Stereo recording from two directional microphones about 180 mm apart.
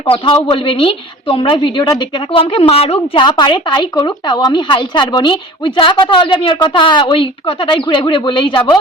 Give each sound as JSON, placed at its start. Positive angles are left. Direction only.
{"t": 0.0, "sound": "a woman's voice", "side_deg": 30}